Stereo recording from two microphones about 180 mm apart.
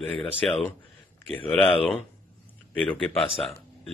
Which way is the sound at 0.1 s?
5° left (ahead or behind).